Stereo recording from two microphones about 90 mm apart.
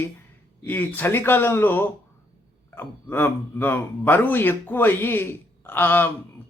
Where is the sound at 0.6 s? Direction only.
20° left (ahead or behind).